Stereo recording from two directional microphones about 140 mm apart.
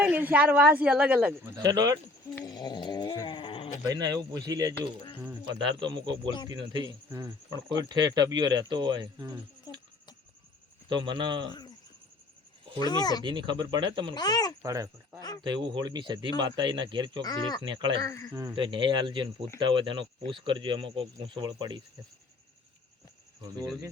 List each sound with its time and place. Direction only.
0.0 s a woman's voice: 10° right (ahead or behind)
1.5 s speech: 25° right (ahead or behind)
2.4 s snoring: 30° left (ahead or behind)
3.8 s speech: 25° right (ahead or behind)
9.7 s a sound: 30° left (ahead or behind)
10.8 s speech: 35° right (ahead or behind)
12.8 s speech: 30° left (ahead or behind)
13.2 s speech: 35° right (ahead or behind)
14.2 s speech: 30° left (ahead or behind)
14.6 s speech: 25° right (ahead or behind)
17.2 s speech: 30° left (ahead or behind)
17.6 s speech: 35° right (ahead or behind)
18.0 s speech: 25° left (ahead or behind)
18.5 s speech: 35° right (ahead or behind)